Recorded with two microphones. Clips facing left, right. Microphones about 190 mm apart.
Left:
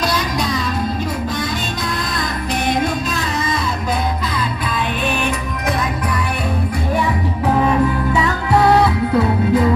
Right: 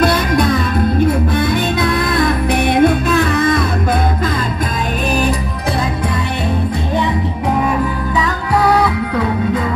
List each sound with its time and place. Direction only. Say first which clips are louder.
0.0 s music: right 6 dB; 55° right (ahead or behind)